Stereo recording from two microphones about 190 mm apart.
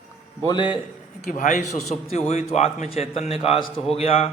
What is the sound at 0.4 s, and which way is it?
Speech, 25° left (ahead or behind).